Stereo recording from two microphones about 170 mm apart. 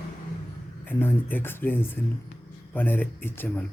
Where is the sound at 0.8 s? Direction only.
10° left (ahead or behind).